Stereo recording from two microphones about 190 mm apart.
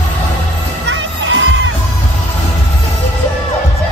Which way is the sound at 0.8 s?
80° right.